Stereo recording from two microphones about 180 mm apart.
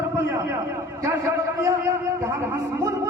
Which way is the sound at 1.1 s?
15° right (ahead or behind).